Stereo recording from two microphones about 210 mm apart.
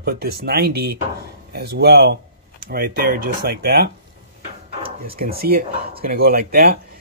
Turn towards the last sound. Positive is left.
turn(degrees=-45)  # may be behind; listen again after turning